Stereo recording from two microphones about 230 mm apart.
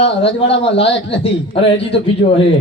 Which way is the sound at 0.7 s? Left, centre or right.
Left.